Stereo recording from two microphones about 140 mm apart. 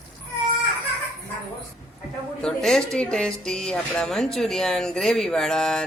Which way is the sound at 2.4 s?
5° left (ahead or behind).